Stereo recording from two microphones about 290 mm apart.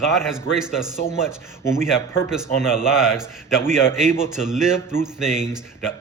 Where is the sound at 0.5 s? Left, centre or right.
Centre.